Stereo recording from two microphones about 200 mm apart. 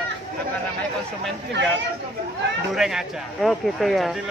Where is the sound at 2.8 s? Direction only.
Centre (ahead or behind).